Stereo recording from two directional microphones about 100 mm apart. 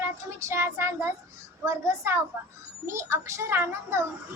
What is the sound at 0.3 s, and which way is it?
A woman's voice, 30° right (ahead or behind).